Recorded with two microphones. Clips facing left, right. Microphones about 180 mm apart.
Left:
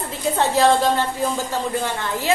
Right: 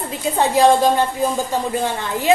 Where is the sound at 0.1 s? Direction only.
15° right (ahead or behind).